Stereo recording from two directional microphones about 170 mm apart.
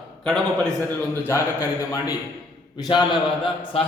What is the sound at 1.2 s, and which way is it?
Speech, 15° left (ahead or behind).